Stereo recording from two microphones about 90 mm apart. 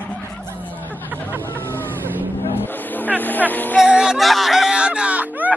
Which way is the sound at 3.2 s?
20° left (ahead or behind).